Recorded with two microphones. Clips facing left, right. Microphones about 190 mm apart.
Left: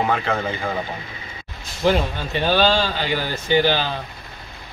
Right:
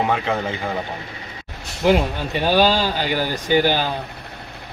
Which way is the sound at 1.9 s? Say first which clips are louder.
Right 2 dB; 10° right (ahead or behind).